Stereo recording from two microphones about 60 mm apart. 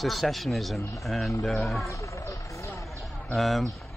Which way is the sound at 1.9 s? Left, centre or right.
Left.